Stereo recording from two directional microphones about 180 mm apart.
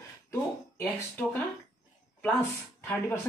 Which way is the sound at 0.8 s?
10° left (ahead or behind).